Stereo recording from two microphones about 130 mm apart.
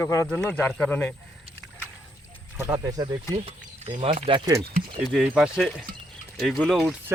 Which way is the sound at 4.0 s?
45° right (ahead or behind).